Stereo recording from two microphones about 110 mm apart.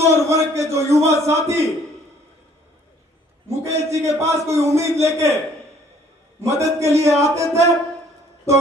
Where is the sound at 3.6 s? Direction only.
25° right (ahead or behind).